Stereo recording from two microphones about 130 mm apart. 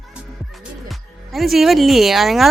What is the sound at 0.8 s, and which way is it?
Speech, centre (ahead or behind).